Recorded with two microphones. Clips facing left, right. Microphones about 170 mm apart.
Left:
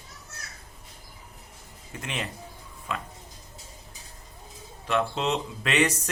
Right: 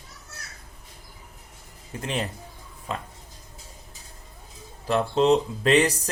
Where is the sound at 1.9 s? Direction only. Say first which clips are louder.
Right 5 dB; 35° right (ahead or behind).